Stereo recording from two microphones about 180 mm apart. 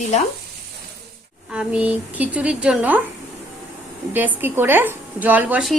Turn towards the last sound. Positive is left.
turn(degrees=-5)  # may be behind; listen again after turning